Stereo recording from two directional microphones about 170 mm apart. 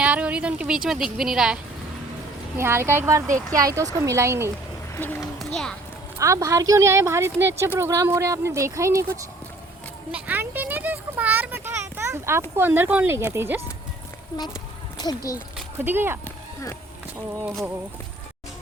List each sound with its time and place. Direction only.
0.0 s a woman's voice: 10° right (ahead or behind)
2.6 s speech: 15° right (ahead or behind)
4.9 s speech: 10° left (ahead or behind)
6.1 s speech: 20° right (ahead or behind)
10.1 s a sound: 10° right (ahead or behind)
14.9 s speech: 25° left (ahead or behind)
15.5 s a sound: 10° right (ahead or behind)
17.4 s a woman's voice: centre (ahead or behind)